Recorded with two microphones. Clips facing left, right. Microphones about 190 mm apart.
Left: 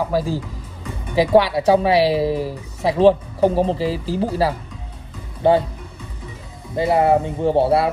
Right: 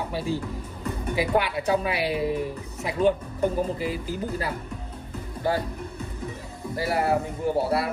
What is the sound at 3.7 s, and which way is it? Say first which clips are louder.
Speech: left 7 dB; 30° left (ahead or behind).